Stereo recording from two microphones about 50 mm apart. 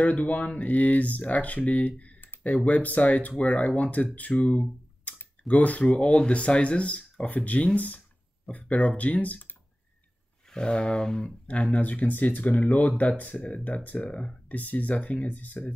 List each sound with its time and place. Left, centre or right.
0.0 s speech: left
10.5 s speech: centre
11.2 s speech: left